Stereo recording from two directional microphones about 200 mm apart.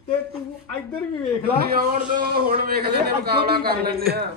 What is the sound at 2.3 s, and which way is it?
A man's voice, 50° right (ahead or behind).